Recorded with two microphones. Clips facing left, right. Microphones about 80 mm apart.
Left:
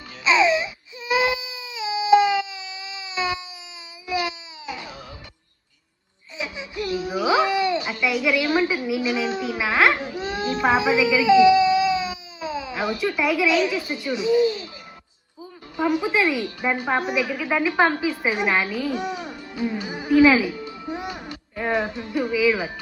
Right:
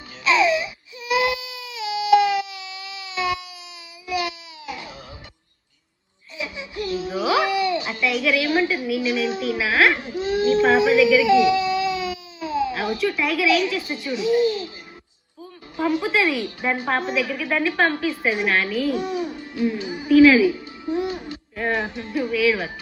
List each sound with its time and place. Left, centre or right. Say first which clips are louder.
0.3 s baby cry: even; left
6.3 s a sound: even; left
8.0 s a child's voice: even; centre
14.4 s music: right 1 dB; left
15.8 s a woman's voice: even; centre
18.7 s a child's voice: right 3 dB; right
18.9 s music: right 3 dB; left
21.7 s speech: left 1 dB; left